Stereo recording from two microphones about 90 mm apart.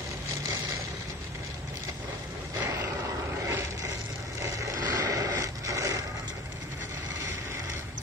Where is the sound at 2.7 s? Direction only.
30° right (ahead or behind).